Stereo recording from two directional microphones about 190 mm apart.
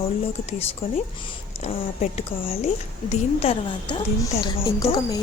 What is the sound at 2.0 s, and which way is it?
Speech, 35° left (ahead or behind).